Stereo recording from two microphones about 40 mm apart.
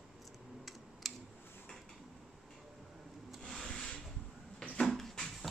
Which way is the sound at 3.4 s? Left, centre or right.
Centre.